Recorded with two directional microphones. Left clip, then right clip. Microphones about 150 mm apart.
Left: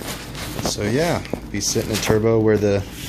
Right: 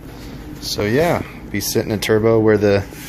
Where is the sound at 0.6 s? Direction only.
Centre (ahead or behind).